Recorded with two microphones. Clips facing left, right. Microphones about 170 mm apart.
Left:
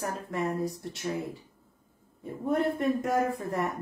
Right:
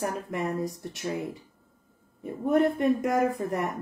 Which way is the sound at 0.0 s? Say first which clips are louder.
Right 2 dB; 15° right (ahead or behind).